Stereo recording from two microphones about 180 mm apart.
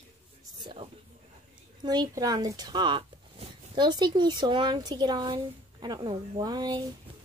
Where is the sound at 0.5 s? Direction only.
25° right (ahead or behind).